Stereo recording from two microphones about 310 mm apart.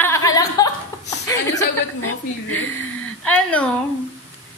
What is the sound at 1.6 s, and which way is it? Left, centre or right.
A woman's voice, left.